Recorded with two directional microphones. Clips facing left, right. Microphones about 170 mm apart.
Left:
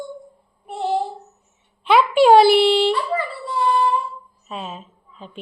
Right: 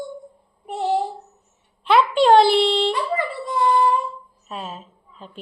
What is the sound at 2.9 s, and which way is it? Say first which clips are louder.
Dog: left 1 dB; 20° right (ahead or behind).